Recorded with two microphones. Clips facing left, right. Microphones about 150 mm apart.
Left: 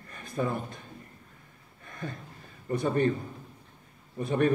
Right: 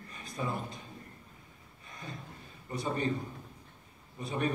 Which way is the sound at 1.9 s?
55° left (ahead or behind).